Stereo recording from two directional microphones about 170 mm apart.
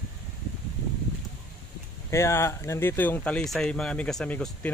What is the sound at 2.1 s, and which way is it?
Speech, 15° left (ahead or behind).